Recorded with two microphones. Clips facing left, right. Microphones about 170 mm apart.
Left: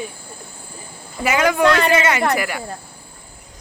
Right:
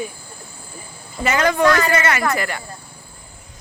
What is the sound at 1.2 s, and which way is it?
Speech, 10° left (ahead or behind).